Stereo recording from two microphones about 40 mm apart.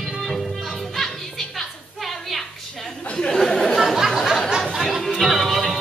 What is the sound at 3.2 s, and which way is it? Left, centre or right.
Chatter, centre.